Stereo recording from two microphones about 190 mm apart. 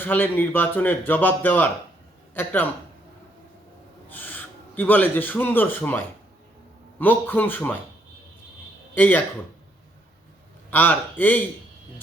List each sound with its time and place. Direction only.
0.0 s speech: 10° left (ahead or behind)
4.1 s speech: 10° left (ahead or behind)
9.0 s speech: 10° left (ahead or behind)
10.7 s speech: 10° left (ahead or behind)